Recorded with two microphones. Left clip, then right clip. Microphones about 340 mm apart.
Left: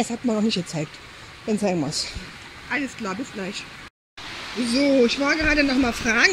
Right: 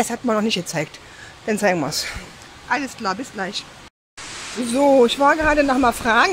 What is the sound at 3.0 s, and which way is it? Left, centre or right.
Speech, centre.